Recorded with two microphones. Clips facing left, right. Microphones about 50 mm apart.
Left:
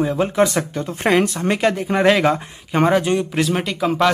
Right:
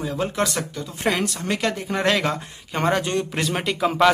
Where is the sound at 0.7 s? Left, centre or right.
Left.